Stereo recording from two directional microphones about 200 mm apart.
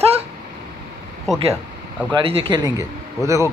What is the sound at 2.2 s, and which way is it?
Speech, 30° right (ahead or behind).